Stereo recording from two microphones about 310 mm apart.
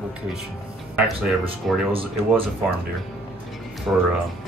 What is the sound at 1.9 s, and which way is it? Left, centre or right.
Speech, centre.